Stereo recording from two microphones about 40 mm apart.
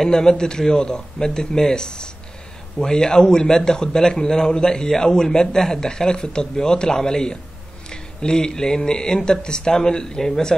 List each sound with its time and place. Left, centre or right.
0.0 s a man's voice: centre